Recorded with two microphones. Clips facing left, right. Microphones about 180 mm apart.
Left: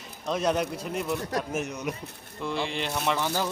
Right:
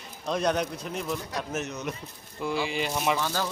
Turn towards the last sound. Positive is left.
turn(degrees=15)  # may be behind; listen again after turning